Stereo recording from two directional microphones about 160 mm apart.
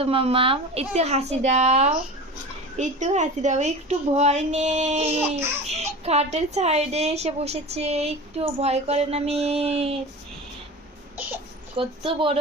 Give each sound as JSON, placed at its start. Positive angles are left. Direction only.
{"t": 0.0, "sound": "a woman's voice", "side_deg": -35}
{"t": 11.8, "sound": "a woman's voice", "side_deg": -35}